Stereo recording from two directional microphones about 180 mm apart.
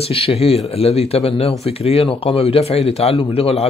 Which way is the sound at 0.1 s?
35° left (ahead or behind).